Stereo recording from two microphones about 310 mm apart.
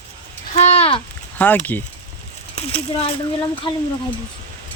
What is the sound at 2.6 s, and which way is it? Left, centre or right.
Speech, centre.